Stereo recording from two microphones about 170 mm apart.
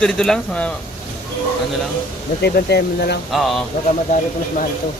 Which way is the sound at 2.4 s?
75° left (ahead or behind).